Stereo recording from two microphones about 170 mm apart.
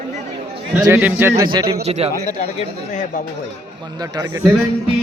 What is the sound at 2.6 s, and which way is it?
Speech, 45° left (ahead or behind).